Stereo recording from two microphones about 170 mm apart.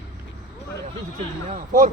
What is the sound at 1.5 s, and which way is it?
Speech, 50° right (ahead or behind).